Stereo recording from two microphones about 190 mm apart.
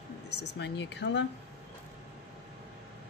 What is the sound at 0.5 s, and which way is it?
Speech, 65° left (ahead or behind).